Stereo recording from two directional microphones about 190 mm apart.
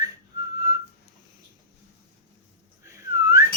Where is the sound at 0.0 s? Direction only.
20° right (ahead or behind).